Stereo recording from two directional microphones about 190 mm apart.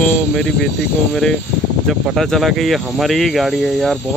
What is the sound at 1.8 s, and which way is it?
Speech, centre (ahead or behind).